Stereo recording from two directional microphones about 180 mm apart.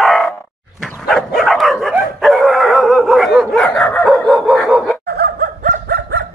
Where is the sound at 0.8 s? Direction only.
5° left (ahead or behind).